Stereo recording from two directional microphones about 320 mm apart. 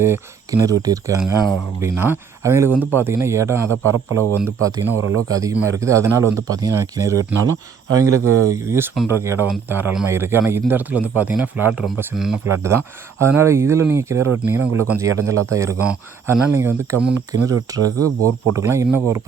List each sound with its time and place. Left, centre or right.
0.0 s speech: centre
4.4 s speech: right
5.3 s speech: centre
8.1 s speech: right
8.4 s speech: centre